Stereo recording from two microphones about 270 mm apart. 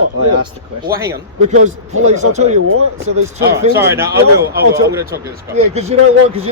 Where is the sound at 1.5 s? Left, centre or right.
Right.